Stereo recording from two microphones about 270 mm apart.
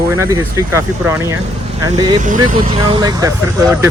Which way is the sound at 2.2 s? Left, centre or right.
Right.